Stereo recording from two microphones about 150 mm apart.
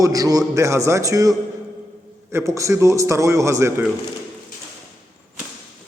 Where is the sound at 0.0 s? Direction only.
25° right (ahead or behind).